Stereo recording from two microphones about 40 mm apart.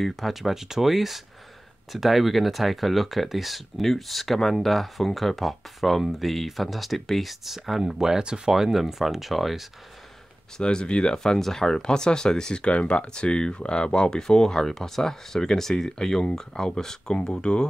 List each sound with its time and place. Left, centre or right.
0.0 s speech: centre
10.6 s speech: left
11.3 s speech: centre; by 17.6 s left